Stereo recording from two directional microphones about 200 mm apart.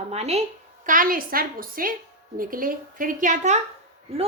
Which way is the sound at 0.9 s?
45° right (ahead or behind).